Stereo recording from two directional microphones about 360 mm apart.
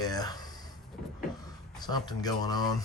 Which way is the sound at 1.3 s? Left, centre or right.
Centre.